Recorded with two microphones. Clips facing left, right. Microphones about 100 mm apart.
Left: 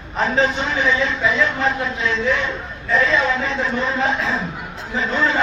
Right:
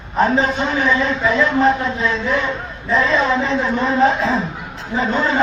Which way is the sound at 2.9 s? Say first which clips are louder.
Right 2 dB; 35° right (ahead or behind).